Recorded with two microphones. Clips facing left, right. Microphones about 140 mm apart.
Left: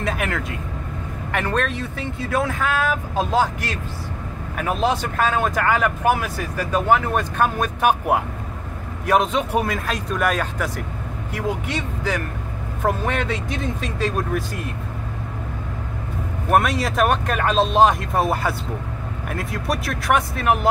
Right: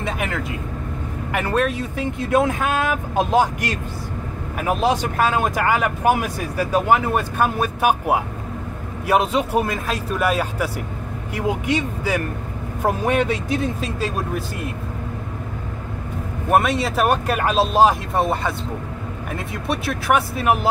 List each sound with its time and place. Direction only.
0.0 s speech: centre (ahead or behind)
16.4 s speech: centre (ahead or behind)